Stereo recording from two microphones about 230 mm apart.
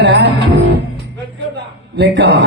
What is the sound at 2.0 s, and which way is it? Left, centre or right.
Speech, right.